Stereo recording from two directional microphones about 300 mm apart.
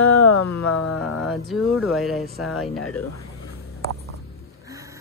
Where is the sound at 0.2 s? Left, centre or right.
Left.